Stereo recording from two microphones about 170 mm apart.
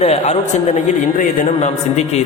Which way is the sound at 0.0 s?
40° left (ahead or behind).